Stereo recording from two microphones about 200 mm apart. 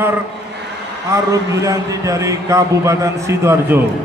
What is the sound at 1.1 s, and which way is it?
A man's voice, 15° right (ahead or behind).